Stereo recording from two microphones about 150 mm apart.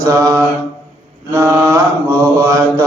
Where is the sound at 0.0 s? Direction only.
20° right (ahead or behind).